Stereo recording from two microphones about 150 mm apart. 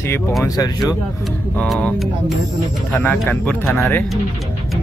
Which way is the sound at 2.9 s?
10° left (ahead or behind).